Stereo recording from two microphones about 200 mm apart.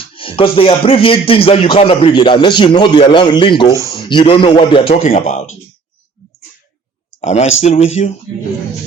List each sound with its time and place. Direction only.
0.0 s speech: 25° left (ahead or behind)
3.7 s speech: 15° right (ahead or behind)
4.1 s speech: 25° left (ahead or behind)
7.2 s speech: 30° left (ahead or behind)